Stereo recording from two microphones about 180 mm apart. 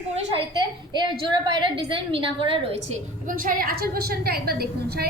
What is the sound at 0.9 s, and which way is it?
A woman's voice, 25° right (ahead or behind).